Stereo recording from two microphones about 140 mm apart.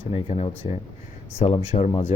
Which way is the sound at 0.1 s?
45° left (ahead or behind).